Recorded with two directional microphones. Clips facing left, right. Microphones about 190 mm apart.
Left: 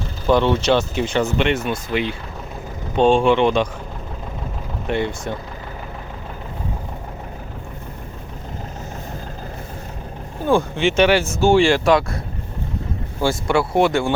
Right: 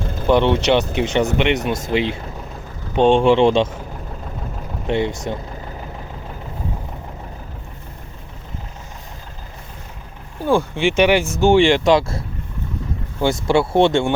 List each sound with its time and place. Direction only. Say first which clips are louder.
0.3 s speech: right 1 dB; 20° right (ahead or behind)
4.9 s speech: right 2 dB; 20° right (ahead or behind)
10.8 s speech: even; 15° right (ahead or behind)
13.2 s speech: right 2 dB; 25° right (ahead or behind)